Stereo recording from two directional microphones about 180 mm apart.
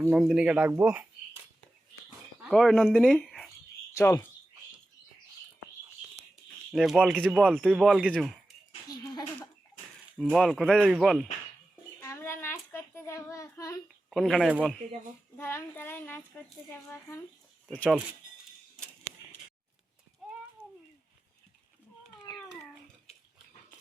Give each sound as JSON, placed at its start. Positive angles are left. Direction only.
{"t": 0.1, "sound": "speech", "side_deg": -5}
{"t": 2.4, "sound": "speech", "side_deg": 0}
{"t": 3.9, "sound": "speech", "side_deg": 15}
{"t": 6.7, "sound": "speech", "side_deg": 0}
{"t": 10.3, "sound": "speech", "side_deg": 0}
{"t": 11.9, "sound": "child singing", "side_deg": 15}
{"t": 14.1, "sound": "speech", "side_deg": 0}
{"t": 15.4, "sound": "speech", "side_deg": 15}